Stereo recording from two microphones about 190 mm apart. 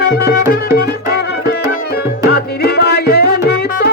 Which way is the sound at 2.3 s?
55° left (ahead or behind).